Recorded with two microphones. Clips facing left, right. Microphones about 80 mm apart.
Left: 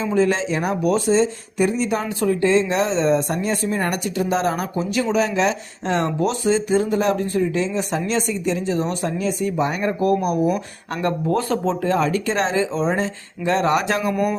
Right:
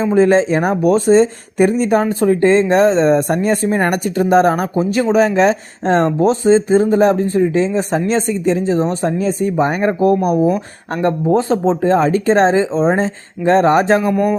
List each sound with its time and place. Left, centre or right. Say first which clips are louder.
0.0 s speech: right 7 dB; right